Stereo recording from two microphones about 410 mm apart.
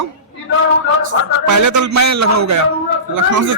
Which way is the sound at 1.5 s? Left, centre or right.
Right.